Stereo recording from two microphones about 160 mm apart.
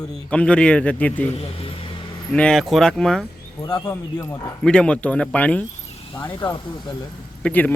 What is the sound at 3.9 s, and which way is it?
Speech, 15° left (ahead or behind).